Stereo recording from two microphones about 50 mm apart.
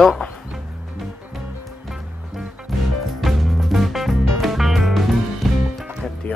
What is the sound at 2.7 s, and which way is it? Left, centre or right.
Music, centre.